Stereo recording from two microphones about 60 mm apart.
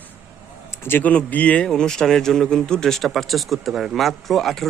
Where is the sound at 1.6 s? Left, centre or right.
Centre.